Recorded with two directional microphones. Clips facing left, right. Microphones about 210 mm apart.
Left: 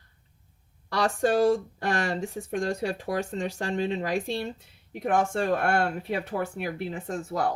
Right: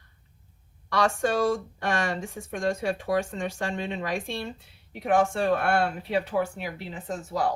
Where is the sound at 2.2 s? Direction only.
35° left (ahead or behind).